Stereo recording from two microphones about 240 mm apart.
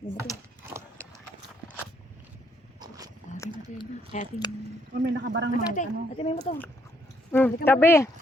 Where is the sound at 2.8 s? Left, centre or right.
Centre.